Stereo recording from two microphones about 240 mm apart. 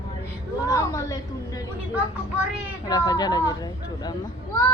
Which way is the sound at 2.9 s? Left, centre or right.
Centre.